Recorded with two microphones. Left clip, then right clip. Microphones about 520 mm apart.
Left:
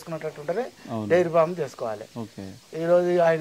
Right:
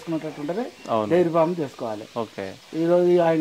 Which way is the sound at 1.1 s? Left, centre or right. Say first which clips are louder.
Left 1 dB; left.